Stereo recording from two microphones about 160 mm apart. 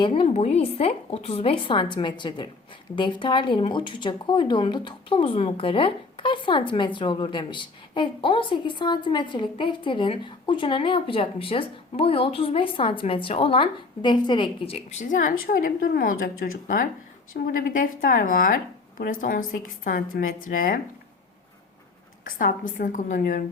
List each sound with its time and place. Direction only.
0.1 s a woman's voice: 40° left (ahead or behind)
15.1 s speech: 55° left (ahead or behind)
22.2 s speech: 60° left (ahead or behind)